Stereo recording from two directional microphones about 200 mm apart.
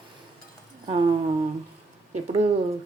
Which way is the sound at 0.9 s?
25° right (ahead or behind).